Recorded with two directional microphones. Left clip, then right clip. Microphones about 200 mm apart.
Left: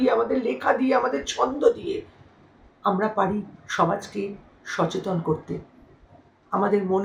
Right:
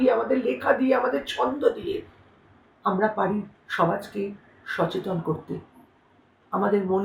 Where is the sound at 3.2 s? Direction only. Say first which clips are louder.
Left 2 dB; centre (ahead or behind).